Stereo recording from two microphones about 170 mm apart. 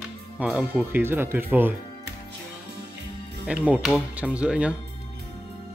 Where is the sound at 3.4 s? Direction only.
5° right (ahead or behind).